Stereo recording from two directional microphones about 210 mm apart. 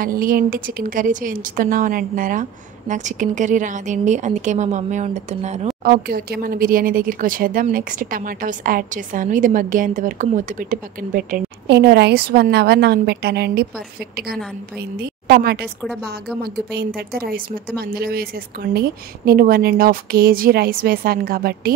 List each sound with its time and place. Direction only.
0.0 s speech: 40° right (ahead or behind)
6.0 s a woman's voice: 45° right (ahead or behind)
15.8 s a woman's voice: centre (ahead or behind)
16.7 s a woman's voice: 50° right (ahead or behind)